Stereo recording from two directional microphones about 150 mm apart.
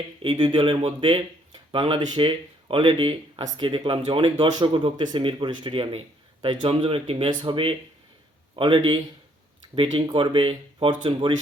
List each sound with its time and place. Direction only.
0.2 s speech: 35° right (ahead or behind)